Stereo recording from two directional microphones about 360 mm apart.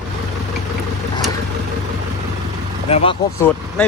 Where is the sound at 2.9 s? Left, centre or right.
Centre.